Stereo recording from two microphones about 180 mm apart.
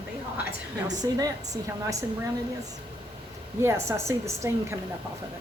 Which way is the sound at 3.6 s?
15° right (ahead or behind).